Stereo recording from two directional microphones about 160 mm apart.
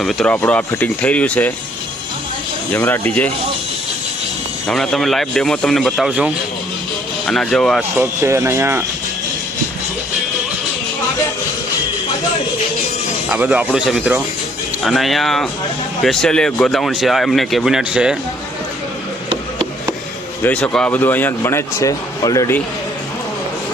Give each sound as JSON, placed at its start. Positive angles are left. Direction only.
{"t": 0.0, "sound": "speech", "side_deg": 0}
{"t": 2.7, "sound": "speech", "side_deg": 15}
{"t": 4.6, "sound": "speech", "side_deg": 0}
{"t": 7.8, "sound": "speech", "side_deg": -15}
{"t": 13.3, "sound": "speech", "side_deg": -10}
{"t": 20.4, "sound": "speech", "side_deg": 10}